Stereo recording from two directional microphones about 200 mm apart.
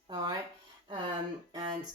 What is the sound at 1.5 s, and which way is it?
Speech, 20° right (ahead or behind).